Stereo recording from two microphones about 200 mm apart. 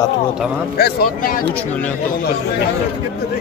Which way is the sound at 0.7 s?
50° left (ahead or behind).